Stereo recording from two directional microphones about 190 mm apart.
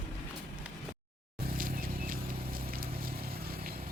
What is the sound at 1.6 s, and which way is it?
Vehicle, 45° right (ahead or behind).